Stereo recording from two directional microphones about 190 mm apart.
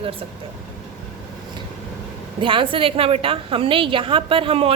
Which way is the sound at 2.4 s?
25° right (ahead or behind).